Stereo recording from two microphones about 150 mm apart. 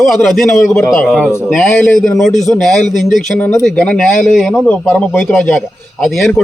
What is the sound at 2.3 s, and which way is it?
Speech, 55° left (ahead or behind).